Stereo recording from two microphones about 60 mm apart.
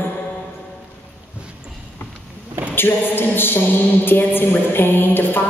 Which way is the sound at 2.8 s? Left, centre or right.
Left.